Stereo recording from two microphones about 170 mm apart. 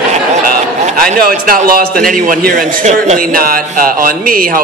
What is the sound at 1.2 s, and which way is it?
Speech, 60° right (ahead or behind).